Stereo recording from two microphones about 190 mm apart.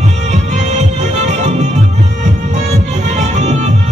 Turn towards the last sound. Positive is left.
turn(degrees=-35)  # may be behind; listen again after turning